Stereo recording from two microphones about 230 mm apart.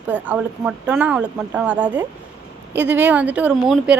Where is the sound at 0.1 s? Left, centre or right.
Centre.